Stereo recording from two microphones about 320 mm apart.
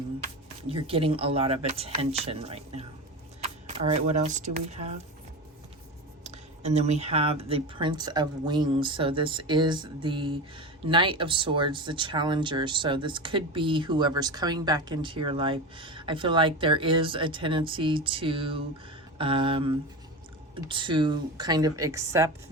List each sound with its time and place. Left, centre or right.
0.7 s speech: centre
6.2 s speech: right